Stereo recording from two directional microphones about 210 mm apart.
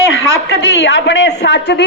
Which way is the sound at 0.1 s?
60° left (ahead or behind).